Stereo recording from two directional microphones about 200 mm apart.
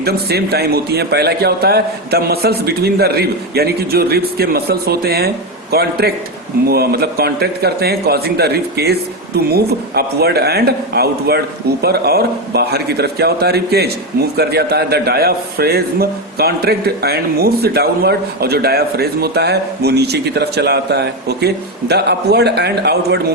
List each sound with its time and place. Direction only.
0.0 s a man's voice: 50° right (ahead or behind)